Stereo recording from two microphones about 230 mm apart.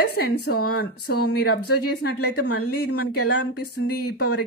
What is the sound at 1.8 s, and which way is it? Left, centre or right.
Speech, left.